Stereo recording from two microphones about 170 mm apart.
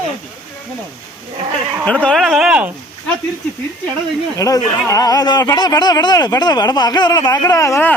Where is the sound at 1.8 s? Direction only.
5° left (ahead or behind).